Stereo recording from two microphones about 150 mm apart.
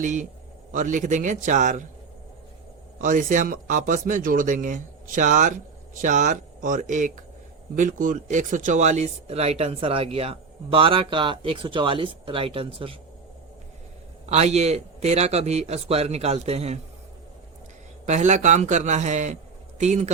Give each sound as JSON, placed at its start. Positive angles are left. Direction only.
{"t": 0.0, "sound": "speech", "side_deg": -55}
{"t": 3.0, "sound": "speech", "side_deg": -60}
{"t": 14.3, "sound": "a man's voice", "side_deg": -45}
{"t": 18.0, "sound": "a man's voice", "side_deg": -50}